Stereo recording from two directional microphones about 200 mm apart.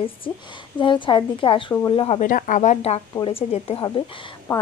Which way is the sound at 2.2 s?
40° left (ahead or behind).